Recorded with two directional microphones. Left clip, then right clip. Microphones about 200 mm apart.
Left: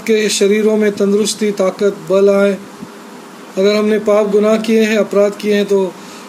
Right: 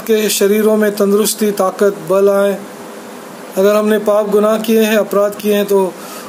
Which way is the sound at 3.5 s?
5° left (ahead or behind).